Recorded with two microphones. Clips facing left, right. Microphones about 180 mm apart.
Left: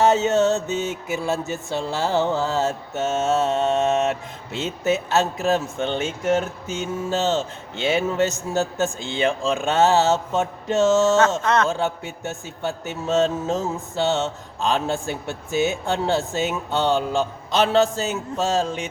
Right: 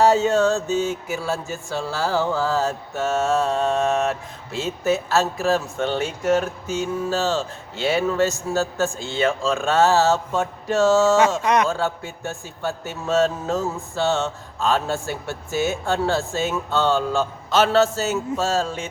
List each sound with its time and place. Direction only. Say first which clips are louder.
0.0 s mantra: right 1 dB; 20° left (ahead or behind)
11.3 s speech: right 1 dB; 15° right (ahead or behind)
11.7 s a sound: even; 20° left (ahead or behind)